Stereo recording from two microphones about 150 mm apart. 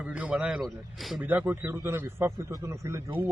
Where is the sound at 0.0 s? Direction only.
10° right (ahead or behind).